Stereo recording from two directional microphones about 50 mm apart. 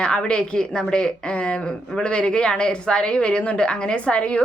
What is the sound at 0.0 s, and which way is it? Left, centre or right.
A woman's voice, centre.